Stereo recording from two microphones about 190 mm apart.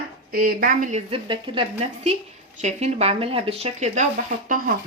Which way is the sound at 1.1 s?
25° right (ahead or behind).